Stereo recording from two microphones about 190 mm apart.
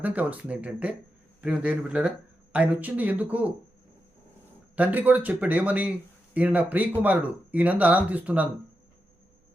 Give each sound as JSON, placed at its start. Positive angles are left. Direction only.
{"t": 0.0, "sound": "speech", "side_deg": -10}
{"t": 4.8, "sound": "speech", "side_deg": -10}